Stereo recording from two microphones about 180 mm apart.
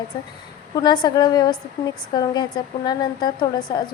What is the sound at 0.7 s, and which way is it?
A woman's voice, 25° left (ahead or behind).